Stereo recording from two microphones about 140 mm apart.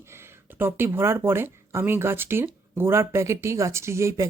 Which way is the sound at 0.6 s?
15° right (ahead or behind).